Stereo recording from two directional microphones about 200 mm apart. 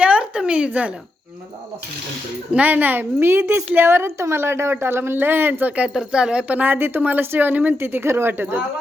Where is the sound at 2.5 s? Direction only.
10° right (ahead or behind).